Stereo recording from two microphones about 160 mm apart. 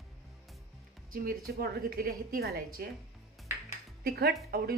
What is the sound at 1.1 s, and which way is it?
Speech, 70° right (ahead or behind).